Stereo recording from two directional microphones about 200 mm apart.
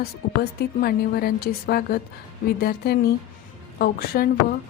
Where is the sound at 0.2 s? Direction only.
50° left (ahead or behind).